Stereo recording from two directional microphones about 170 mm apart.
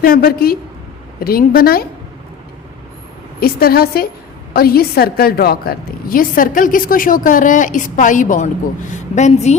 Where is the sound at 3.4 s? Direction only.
65° left (ahead or behind).